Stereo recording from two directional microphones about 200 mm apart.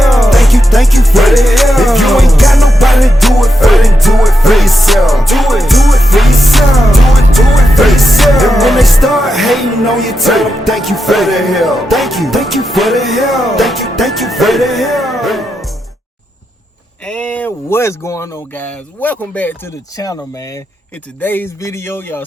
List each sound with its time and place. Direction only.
0.0 s music: centre (ahead or behind)
17.1 s speech: 5° left (ahead or behind)